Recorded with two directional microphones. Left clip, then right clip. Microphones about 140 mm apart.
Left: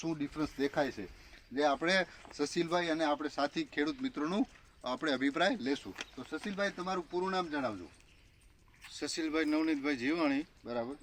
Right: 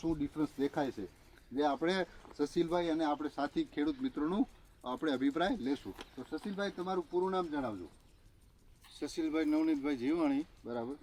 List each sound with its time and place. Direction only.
0.0 s speech: 20° left (ahead or behind)
8.9 s speech: 5° left (ahead or behind)
10.7 s speech: 25° left (ahead or behind)